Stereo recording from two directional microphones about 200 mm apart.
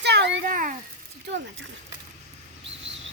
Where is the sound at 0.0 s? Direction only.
60° right (ahead or behind).